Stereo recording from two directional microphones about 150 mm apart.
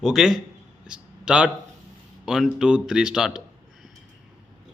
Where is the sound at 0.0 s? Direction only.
5° right (ahead or behind).